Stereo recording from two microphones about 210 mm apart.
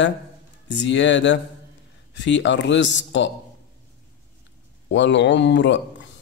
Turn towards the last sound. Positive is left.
turn(degrees=60)  # may be behind; listen again after turning